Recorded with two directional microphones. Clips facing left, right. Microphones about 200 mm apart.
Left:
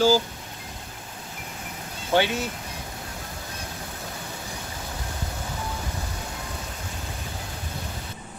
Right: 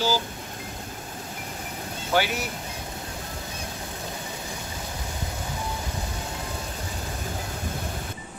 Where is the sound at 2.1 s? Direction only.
25° left (ahead or behind).